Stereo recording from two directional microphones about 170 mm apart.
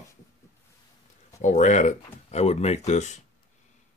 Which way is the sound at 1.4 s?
45° left (ahead or behind).